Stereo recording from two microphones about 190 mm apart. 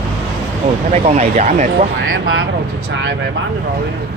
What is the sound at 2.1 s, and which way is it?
Speech, 90° right.